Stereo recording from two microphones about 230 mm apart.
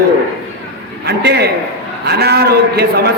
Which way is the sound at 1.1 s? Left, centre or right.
Right.